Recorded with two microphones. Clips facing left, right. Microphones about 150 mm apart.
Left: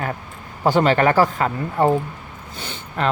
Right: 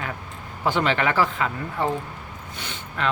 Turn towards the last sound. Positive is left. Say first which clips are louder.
# left 4 dB
turn(degrees=30)  # may be behind; listen again after turning